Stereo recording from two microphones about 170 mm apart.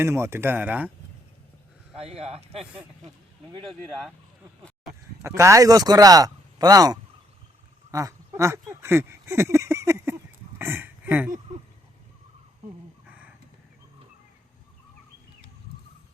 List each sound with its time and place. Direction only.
0.0 s speech: 15° right (ahead or behind)
2.0 s a man's voice: 35° right (ahead or behind)
3.7 s speech: centre (ahead or behind)
4.6 s a sound: centre (ahead or behind)
5.2 s speech: 15° right (ahead or behind)
13.1 s a sound: 10° right (ahead or behind)